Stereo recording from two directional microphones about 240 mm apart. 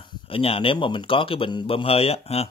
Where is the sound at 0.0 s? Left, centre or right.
Left.